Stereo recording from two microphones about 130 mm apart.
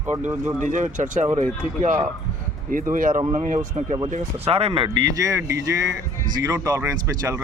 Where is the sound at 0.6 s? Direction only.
75° right (ahead or behind).